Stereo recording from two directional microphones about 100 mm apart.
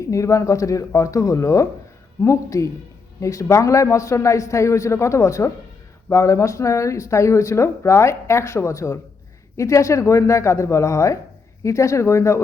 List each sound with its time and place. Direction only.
0.0 s a man's voice: 30° left (ahead or behind)